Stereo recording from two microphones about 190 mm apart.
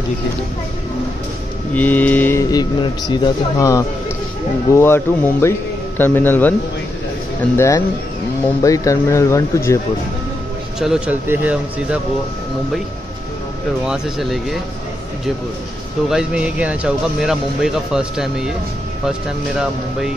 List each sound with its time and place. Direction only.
1.7 s speech: 10° left (ahead or behind)
2.5 s speech: 20° left (ahead or behind)
7.5 s speech: 15° left (ahead or behind)
10.8 s speech: 5° right (ahead or behind)
13.8 s speech: 5° right (ahead or behind)
16.1 s speech: 5° right (ahead or behind)